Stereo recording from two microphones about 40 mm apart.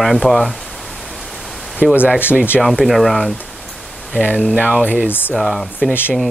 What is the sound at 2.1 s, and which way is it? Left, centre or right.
Speech, right.